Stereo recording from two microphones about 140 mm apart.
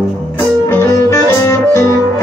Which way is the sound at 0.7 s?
20° left (ahead or behind).